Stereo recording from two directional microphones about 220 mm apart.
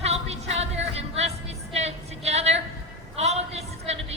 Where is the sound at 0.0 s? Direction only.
30° right (ahead or behind).